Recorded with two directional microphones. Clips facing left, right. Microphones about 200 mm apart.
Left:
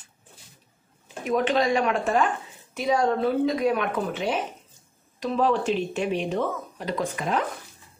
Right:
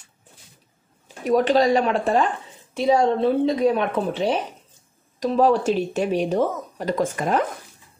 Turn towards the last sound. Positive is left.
turn(degrees=-45)  # may be behind; listen again after turning